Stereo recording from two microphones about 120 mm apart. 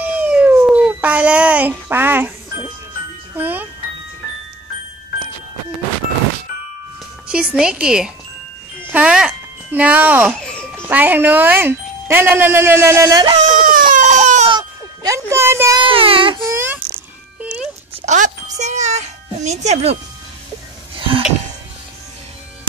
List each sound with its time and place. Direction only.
0.0 s cat: 10° right (ahead or behind)
0.7 s a sound: 10° right (ahead or behind)
3.3 s music: 15° right (ahead or behind)
7.2 s speech: 5° right (ahead or behind)
13.1 s speech: 35° right (ahead or behind)
13.5 s baby cry: 90° right
14.6 s a sound: 25° right (ahead or behind)
15.8 s speech: 50° right (ahead or behind)
16.4 s cricket: 20° right (ahead or behind)
17.4 s music: 10° right (ahead or behind)
17.9 s a child's voice: 80° right; by 20.0 s 60° right (ahead or behind)